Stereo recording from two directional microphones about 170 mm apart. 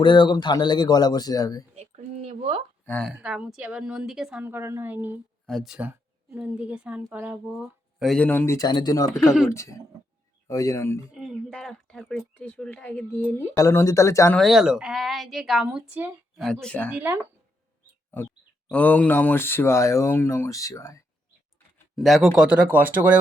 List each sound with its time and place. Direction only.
0.0 s a man's voice: 25° left (ahead or behind)
1.7 s a sound: 40° right (ahead or behind)
2.8 s speech: 10° left (ahead or behind)
3.1 s speech: 5° right (ahead or behind)
5.5 s speech: centre (ahead or behind); by 9.0 s 25° left (ahead or behind)
9.1 s speech: centre (ahead or behind)
10.5 s speech: 20° left (ahead or behind)
11.1 s speech: 5° right (ahead or behind)
13.6 s speech: 20° left (ahead or behind)
14.3 s speech: centre (ahead or behind)
16.4 s speech: 5° left (ahead or behind)
16.9 s speech: 10° right (ahead or behind)
18.7 s speech: 10° left (ahead or behind)
21.9 s speech: centre (ahead or behind)